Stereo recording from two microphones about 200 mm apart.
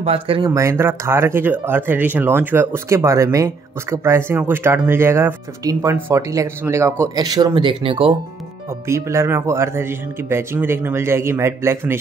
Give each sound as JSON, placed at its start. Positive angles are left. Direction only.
{"t": 0.0, "sound": "speech", "side_deg": -30}
{"t": 0.5, "sound": "speech", "side_deg": -15}
{"t": 8.6, "sound": "speech", "side_deg": -15}